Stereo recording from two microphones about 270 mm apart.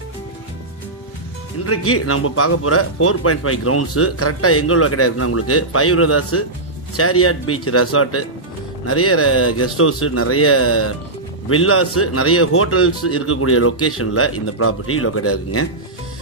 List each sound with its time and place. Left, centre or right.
1.7 s a man's voice: left